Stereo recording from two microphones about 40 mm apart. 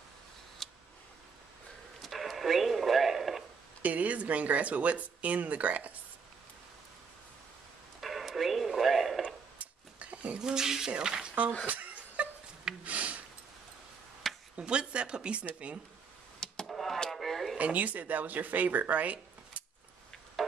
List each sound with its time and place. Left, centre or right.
0.6 s tick: centre
2.0 s radio: centre
3.8 s speech: right
8.0 s radio: centre
9.2 s a sound: right
10.4 s speech: centre
11.6 s chuckle: right
12.8 s a sound: right
14.2 s a sound: centre
14.6 s speech: right
16.6 s a sound: centre
17.6 s speech: right
20.4 s music: centre